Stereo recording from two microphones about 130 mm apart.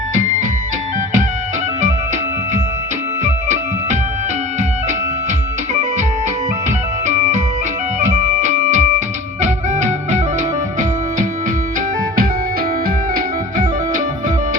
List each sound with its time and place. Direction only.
0.1 s music: 90° right
3.2 s music: 70° right (ahead or behind)
6.7 s music: 75° right (ahead or behind)
13.1 s music: 90° right